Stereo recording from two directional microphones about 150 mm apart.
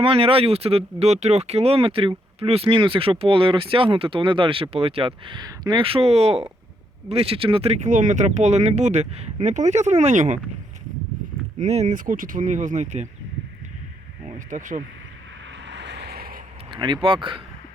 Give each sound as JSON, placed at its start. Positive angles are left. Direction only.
{"t": 0.0, "sound": "speech", "side_deg": -40}
{"t": 11.6, "sound": "speech", "side_deg": -50}
{"t": 14.3, "sound": "speech", "side_deg": -60}
{"t": 16.0, "sound": "vehicle", "side_deg": -90}
{"t": 16.7, "sound": "speech", "side_deg": -30}